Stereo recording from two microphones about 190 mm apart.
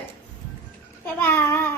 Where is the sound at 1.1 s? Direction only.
10° left (ahead or behind).